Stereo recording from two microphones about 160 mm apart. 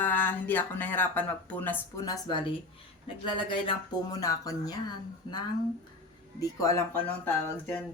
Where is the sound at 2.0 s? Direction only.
25° left (ahead or behind); by 7.7 s 10° left (ahead or behind).